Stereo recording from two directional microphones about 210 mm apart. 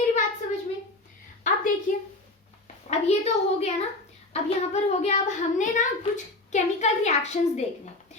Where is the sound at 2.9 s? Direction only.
30° left (ahead or behind).